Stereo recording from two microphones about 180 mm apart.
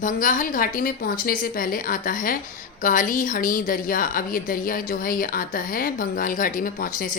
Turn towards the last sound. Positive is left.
turn(degrees=50)  # may be behind; listen again after turning